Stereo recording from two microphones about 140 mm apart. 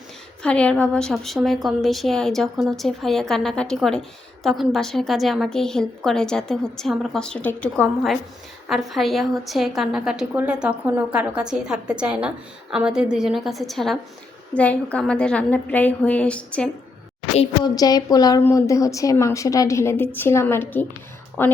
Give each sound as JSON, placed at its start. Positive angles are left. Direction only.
{"t": 0.4, "sound": "a woman's voice", "side_deg": 10}
{"t": 17.6, "sound": "a woman's voice", "side_deg": 30}